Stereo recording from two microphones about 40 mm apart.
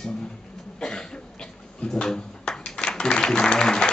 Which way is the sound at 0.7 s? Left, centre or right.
Centre.